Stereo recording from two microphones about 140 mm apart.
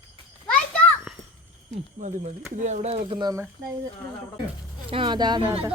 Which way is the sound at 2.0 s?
60° right (ahead or behind).